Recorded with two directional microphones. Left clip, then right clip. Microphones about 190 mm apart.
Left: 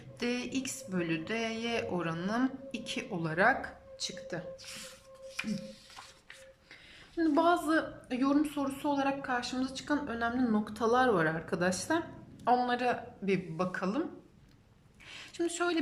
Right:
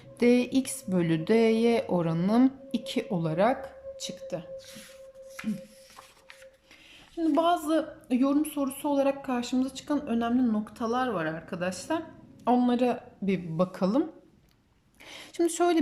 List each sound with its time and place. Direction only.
0.2 s speech: 25° right (ahead or behind)
7.2 s a woman's voice: 10° right (ahead or behind)
12.5 s speech: 15° right (ahead or behind)
15.1 s speech: 30° right (ahead or behind)